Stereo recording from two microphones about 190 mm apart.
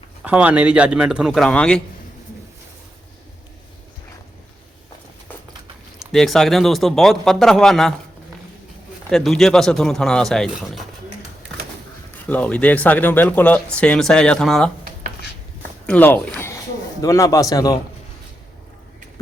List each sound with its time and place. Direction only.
0.2 s speech: 5° right (ahead or behind)
6.0 s speech: centre (ahead or behind)
9.0 s speech: 5° left (ahead or behind)
12.3 s speech: 5° left (ahead or behind)
15.9 s speech: 10° left (ahead or behind)